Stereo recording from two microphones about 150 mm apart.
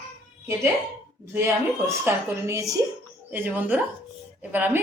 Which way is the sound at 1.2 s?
15° right (ahead or behind).